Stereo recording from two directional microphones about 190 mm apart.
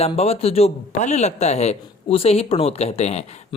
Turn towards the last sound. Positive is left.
turn(degrees=35)  # may be behind; listen again after turning